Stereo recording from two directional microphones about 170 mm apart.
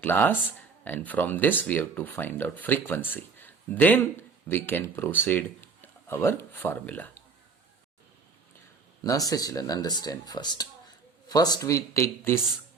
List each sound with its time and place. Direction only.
0.0 s speech: 10° left (ahead or behind)
9.0 s speech: 20° left (ahead or behind)